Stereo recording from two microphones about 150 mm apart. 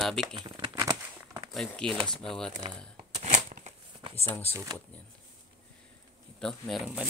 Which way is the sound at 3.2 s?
55° right (ahead or behind).